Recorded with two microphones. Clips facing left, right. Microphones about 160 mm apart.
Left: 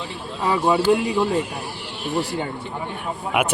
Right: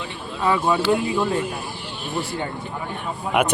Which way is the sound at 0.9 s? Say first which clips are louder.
Left 1 dB; 80° left.